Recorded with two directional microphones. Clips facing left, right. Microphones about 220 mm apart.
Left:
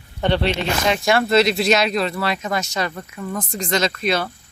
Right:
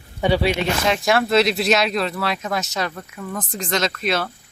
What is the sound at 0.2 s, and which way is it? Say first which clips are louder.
Speech: right 1 dB; 10° right (ahead or behind).